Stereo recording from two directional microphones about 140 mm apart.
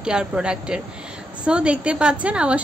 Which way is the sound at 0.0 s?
5° right (ahead or behind).